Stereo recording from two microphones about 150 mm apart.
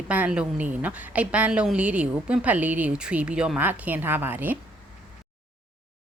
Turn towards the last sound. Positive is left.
turn(degrees=-15)  # may be behind; listen again after turning